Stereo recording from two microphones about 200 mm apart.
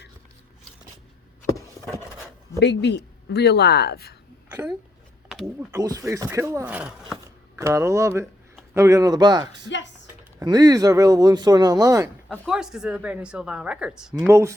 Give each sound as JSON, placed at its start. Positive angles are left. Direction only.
{"t": 2.6, "sound": "speech", "side_deg": 60}
{"t": 4.5, "sound": "speech", "side_deg": -10}
{"t": 9.6, "sound": "speech", "side_deg": 65}
{"t": 10.4, "sound": "speech", "side_deg": -20}
{"t": 12.5, "sound": "a woman's voice", "side_deg": 0}